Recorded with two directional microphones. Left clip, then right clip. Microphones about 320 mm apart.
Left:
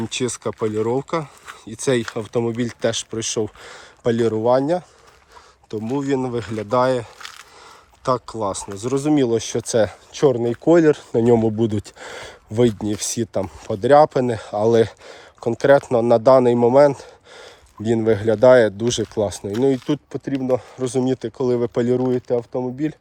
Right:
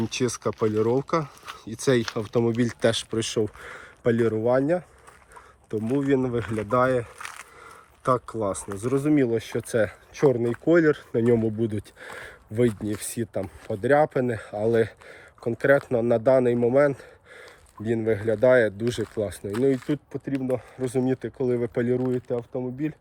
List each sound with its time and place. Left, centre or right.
0.0 s speech: centre; by 23.0 s left